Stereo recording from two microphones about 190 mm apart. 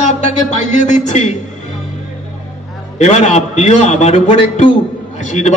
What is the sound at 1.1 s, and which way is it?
Speech, 35° left (ahead or behind).